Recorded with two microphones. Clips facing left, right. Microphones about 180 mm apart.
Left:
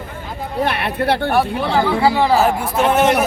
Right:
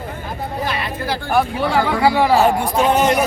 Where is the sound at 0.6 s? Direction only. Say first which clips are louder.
Left 7 dB; 65° left (ahead or behind).